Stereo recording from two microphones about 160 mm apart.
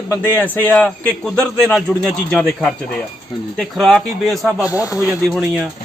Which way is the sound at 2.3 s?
5° left (ahead or behind).